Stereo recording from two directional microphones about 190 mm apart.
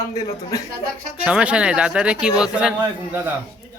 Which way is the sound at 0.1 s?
20° left (ahead or behind).